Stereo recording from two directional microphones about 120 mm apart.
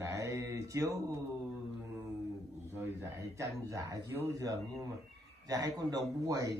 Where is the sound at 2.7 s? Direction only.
25° right (ahead or behind).